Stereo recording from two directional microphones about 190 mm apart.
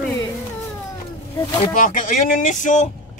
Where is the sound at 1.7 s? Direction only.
45° left (ahead or behind).